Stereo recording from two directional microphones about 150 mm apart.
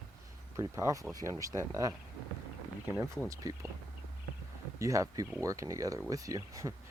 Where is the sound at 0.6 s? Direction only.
20° right (ahead or behind).